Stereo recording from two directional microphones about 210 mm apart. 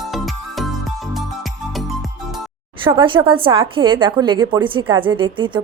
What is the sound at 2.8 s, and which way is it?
A woman's voice, 25° right (ahead or behind).